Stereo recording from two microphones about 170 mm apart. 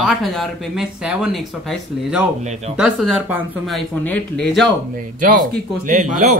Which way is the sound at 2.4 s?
40° right (ahead or behind).